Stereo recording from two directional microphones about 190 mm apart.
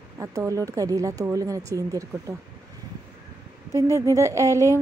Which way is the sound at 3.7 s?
15° right (ahead or behind).